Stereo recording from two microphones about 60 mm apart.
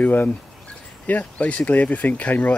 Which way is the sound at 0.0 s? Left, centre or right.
Left.